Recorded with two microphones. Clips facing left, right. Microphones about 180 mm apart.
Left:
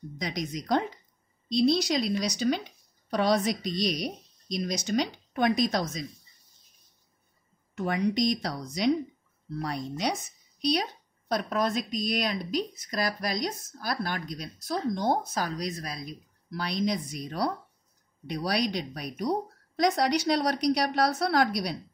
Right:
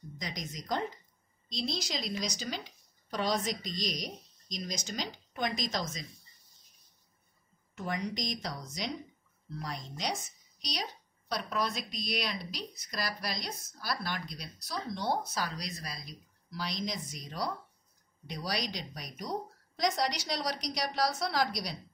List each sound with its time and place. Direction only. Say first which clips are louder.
0.2 s a woman's voice: left 8 dB; 65° left (ahead or behind)
7.7 s a woman's voice: left 9 dB; 65° left (ahead or behind)